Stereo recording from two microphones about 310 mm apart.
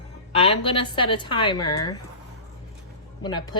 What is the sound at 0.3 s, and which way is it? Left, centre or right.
A woman's voice, centre.